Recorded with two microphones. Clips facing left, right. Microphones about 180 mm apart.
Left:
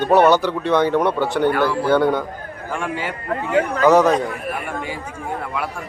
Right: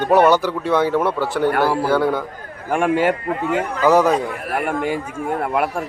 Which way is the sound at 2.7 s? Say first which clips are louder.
Right 9 dB; 55° right (ahead or behind).